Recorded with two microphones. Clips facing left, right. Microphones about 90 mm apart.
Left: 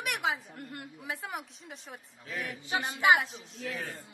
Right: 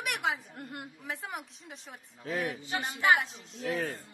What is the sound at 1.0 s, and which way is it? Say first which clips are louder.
Speech: left 2 dB; centre (ahead or behind).